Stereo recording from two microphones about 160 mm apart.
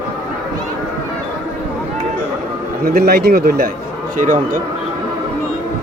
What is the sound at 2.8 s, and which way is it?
Speech, 75° right (ahead or behind).